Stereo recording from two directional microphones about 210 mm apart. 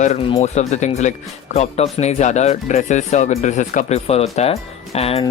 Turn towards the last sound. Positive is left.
turn(degrees=30)  # may be behind; listen again after turning